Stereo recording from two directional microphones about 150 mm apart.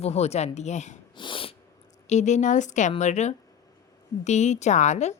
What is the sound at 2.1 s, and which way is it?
A woman's voice, 50° left (ahead or behind).